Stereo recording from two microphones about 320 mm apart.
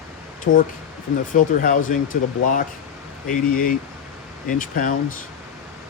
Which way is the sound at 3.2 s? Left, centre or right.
Left.